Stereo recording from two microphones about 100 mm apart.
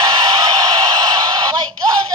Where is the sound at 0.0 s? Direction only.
45° right (ahead or behind).